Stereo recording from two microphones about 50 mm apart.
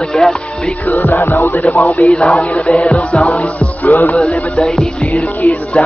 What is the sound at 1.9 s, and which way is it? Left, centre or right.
Music, left.